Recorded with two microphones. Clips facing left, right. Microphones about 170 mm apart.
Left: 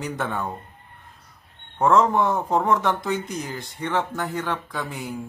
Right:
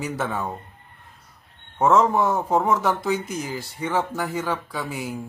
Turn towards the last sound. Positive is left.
turn(degrees=-10)  # may be behind; listen again after turning